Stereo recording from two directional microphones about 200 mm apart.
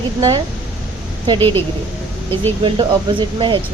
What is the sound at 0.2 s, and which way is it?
Speech, 20° right (ahead or behind).